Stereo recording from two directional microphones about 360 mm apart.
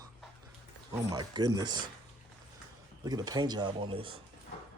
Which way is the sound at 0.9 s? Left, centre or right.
Centre.